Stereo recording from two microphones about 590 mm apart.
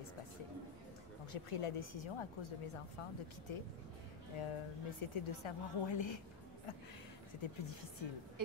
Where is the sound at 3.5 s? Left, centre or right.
Left.